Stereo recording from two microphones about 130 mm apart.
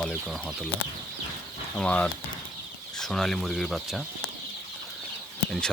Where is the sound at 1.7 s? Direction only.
10° left (ahead or behind).